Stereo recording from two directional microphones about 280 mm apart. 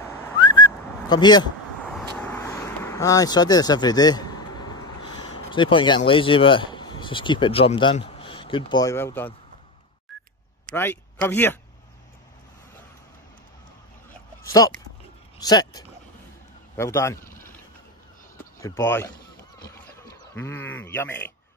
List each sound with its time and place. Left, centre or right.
0.4 s whistling: centre
2.0 s vehicle: centre
10.8 s speech: centre
15.3 s speech: centre
17.3 s a sound: left
18.6 s speech: centre
19.6 s a sound: centre